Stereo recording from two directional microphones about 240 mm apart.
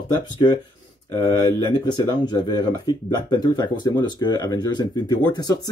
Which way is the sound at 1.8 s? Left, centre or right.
Centre.